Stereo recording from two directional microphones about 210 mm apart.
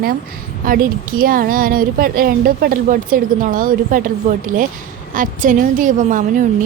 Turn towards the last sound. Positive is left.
turn(degrees=-40)  # may be behind; listen again after turning